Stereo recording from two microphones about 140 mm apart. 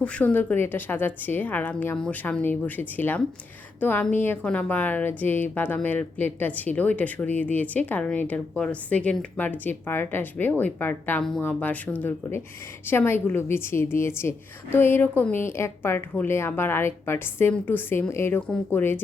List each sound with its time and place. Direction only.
0.0 s a woman's voice: 10° left (ahead or behind)